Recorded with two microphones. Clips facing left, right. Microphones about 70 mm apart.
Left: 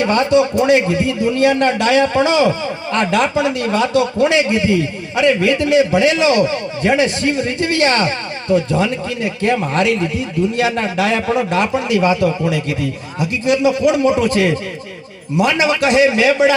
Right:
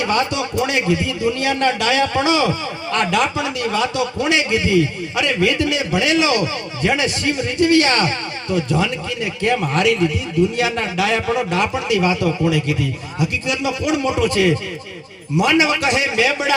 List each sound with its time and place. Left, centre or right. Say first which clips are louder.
0.0 s a man's voice: left 6 dB; left